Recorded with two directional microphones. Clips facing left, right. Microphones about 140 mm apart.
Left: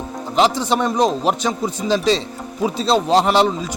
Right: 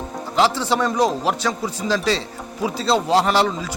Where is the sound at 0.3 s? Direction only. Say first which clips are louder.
Left 2 dB; 20° left (ahead or behind).